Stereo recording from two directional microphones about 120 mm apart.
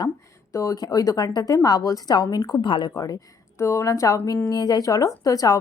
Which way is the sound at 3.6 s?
25° left (ahead or behind).